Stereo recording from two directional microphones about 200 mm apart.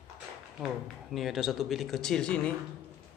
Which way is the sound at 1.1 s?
Centre (ahead or behind).